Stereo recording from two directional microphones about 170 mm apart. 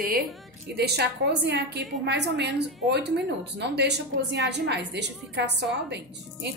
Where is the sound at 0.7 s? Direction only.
75° right (ahead or behind).